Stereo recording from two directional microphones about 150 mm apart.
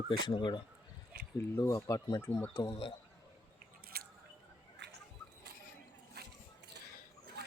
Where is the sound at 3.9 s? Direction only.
90° right.